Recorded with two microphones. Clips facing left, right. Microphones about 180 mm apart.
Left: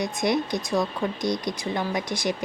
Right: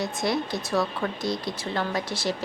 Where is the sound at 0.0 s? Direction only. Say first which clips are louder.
Left 2 dB; 15° left (ahead or behind).